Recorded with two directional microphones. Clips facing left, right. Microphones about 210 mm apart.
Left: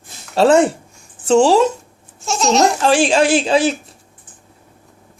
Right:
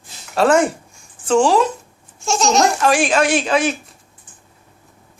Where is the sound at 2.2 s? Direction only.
Centre (ahead or behind).